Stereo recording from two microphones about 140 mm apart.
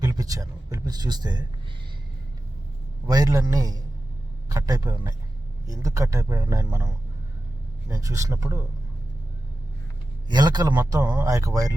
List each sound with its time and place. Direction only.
0.0 s speech: 25° right (ahead or behind)
3.1 s speech: 25° right (ahead or behind)
7.9 s speech: 25° right (ahead or behind)
10.2 s speech: 30° right (ahead or behind)